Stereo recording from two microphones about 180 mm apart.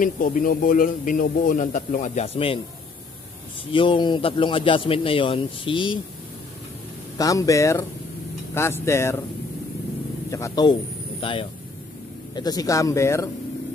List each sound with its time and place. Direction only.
0.0 s a man's voice: 50° left (ahead or behind); by 2.6 s 30° left (ahead or behind)
3.7 s speech: 30° left (ahead or behind)
7.2 s a man's voice: 20° left (ahead or behind)
10.3 s speech: 20° left (ahead or behind)
11.1 s a man's voice: 30° left (ahead or behind)